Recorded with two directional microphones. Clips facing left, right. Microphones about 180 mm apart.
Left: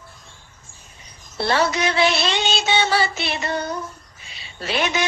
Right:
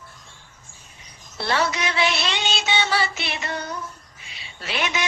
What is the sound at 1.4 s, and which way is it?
Music, 35° left (ahead or behind).